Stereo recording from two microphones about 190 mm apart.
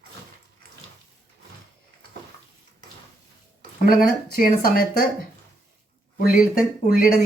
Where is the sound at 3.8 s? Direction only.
50° left (ahead or behind).